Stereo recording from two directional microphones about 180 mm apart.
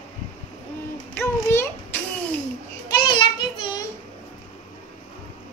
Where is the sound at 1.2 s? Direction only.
10° left (ahead or behind).